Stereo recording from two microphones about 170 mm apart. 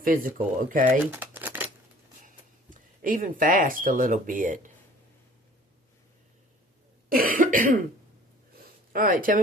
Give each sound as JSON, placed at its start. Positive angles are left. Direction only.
{"t": 0.0, "sound": "speech", "side_deg": -55}
{"t": 1.1, "sound": "crumpling", "side_deg": -10}
{"t": 2.2, "sound": "speech", "side_deg": -50}
{"t": 7.1, "sound": "cough", "side_deg": -55}
{"t": 8.5, "sound": "a sound", "side_deg": -55}